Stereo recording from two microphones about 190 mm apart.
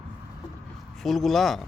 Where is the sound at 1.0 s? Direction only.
Centre (ahead or behind).